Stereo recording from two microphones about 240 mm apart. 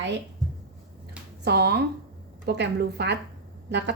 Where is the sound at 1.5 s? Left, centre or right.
Right.